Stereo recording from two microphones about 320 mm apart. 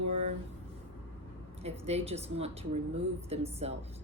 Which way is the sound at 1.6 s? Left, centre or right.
Centre.